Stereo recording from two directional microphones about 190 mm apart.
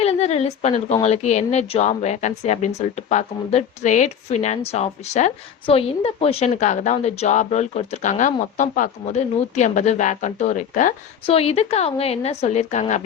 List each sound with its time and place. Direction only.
0.0 s a woman's voice: 35° left (ahead or behind)